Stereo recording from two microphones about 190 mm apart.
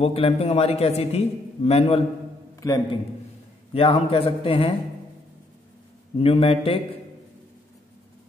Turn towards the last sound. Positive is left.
turn(degrees=30)  # may be behind; listen again after turning